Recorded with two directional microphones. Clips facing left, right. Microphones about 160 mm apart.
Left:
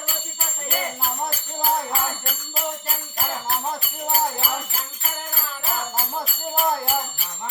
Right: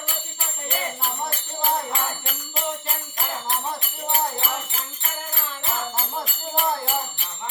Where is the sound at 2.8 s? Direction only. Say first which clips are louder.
Left 1 dB; 5° left (ahead or behind).